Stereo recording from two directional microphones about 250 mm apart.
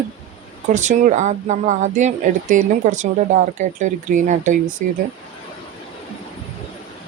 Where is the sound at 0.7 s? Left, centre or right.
Right.